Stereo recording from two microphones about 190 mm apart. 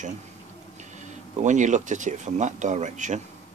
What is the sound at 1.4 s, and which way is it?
Speech, 40° right (ahead or behind).